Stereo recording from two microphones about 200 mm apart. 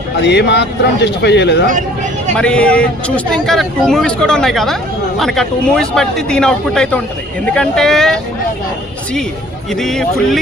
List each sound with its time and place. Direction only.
0.2 s a man's voice: 60° left (ahead or behind)
2.3 s speech: 5° left (ahead or behind)
9.7 s speech: centre (ahead or behind)